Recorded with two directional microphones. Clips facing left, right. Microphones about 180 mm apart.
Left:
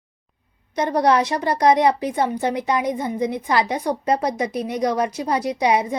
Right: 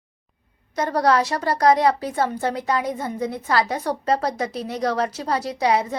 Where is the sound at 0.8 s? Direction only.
20° left (ahead or behind).